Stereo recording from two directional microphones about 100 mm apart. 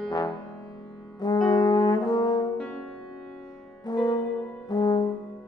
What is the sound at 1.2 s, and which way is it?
Brass instrument, 45° left (ahead or behind).